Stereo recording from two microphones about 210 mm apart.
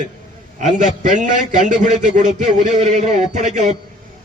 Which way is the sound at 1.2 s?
35° right (ahead or behind).